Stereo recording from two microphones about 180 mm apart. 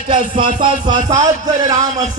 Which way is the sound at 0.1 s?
30° right (ahead or behind).